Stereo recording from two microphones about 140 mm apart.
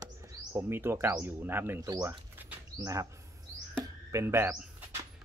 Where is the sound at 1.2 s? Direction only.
15° right (ahead or behind).